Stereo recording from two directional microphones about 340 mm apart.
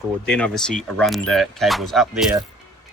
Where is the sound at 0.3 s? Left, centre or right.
Centre.